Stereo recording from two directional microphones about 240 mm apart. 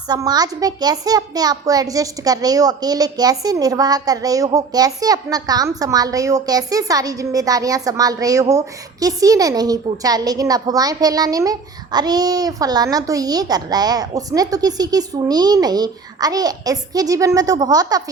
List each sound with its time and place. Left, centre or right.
0.1 s a child's voice: centre